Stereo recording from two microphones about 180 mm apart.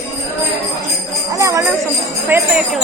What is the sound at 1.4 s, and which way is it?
Jingle bell, 20° right (ahead or behind).